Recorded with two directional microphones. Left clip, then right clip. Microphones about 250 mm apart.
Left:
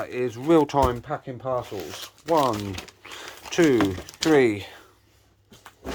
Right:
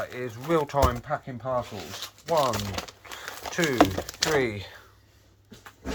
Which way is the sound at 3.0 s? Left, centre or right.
Left.